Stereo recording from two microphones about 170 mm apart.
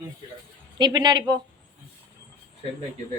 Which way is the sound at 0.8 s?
25° right (ahead or behind).